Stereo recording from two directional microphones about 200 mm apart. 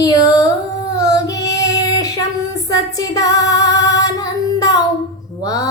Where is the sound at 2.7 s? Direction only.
15° left (ahead or behind).